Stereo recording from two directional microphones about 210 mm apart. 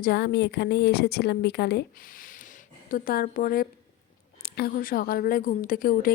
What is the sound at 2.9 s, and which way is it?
A woman's voice, 45° left (ahead or behind).